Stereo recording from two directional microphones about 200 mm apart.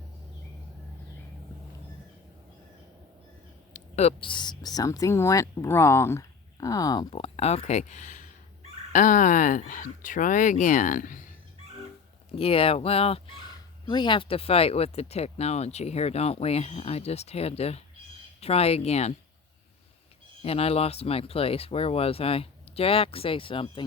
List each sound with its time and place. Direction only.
3.7 s speech: 35° left (ahead or behind)
12.3 s speech: 30° left (ahead or behind)
20.4 s speech: 30° left (ahead or behind)